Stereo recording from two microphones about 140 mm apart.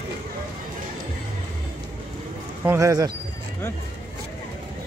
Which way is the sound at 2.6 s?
20° right (ahead or behind).